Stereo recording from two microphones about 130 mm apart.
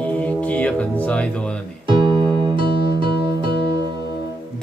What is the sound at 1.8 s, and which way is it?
Music, 40° right (ahead or behind).